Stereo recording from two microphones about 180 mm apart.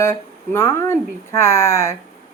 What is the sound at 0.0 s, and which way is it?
Speech, 15° left (ahead or behind).